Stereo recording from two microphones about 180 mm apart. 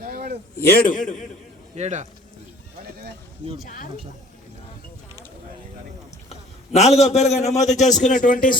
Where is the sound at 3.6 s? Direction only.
50° left (ahead or behind).